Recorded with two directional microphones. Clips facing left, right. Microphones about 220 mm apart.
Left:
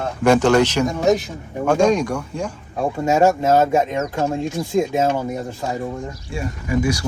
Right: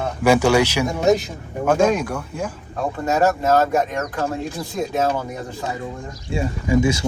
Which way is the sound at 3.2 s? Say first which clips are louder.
Left 2 dB; 25° left (ahead or behind).